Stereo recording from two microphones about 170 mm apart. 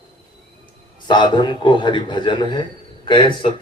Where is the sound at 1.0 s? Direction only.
25° left (ahead or behind).